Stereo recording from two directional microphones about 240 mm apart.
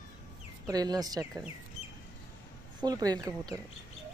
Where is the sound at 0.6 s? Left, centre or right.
Centre.